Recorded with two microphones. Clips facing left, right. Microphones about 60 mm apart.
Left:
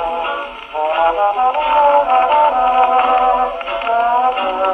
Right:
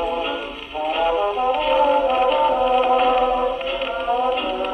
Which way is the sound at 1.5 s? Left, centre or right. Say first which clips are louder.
Left 5 dB; left.